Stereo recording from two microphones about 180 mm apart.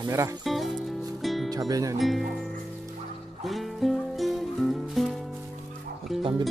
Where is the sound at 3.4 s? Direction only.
Centre (ahead or behind).